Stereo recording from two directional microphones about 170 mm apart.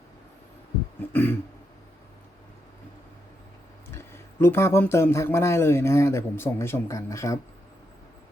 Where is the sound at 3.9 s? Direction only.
15° left (ahead or behind).